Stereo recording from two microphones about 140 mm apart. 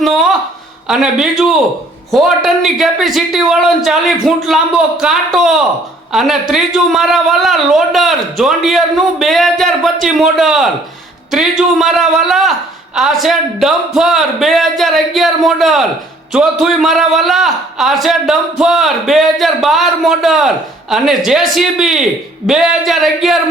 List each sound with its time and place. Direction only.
0.9 s speech: centre (ahead or behind)